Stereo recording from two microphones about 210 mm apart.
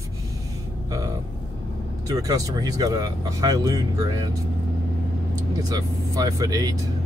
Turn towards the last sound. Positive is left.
turn(degrees=-15)  # may be behind; listen again after turning